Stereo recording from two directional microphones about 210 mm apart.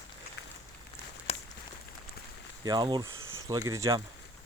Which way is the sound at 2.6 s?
20° right (ahead or behind).